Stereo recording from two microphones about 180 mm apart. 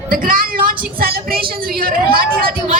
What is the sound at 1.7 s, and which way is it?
Speech, 55° right (ahead or behind).